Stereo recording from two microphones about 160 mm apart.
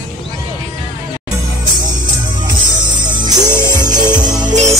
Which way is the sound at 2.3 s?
30° right (ahead or behind).